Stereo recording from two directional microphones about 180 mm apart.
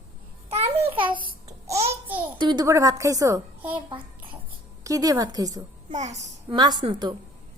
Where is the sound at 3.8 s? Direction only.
30° right (ahead or behind).